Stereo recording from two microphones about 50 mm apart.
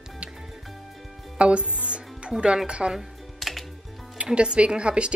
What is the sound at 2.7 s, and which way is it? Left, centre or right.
Speech, right.